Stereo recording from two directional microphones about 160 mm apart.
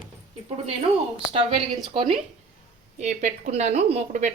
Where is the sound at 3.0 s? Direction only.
45° right (ahead or behind).